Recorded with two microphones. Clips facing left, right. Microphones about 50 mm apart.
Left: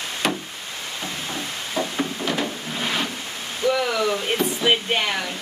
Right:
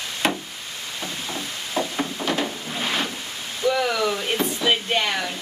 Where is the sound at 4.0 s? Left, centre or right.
Centre.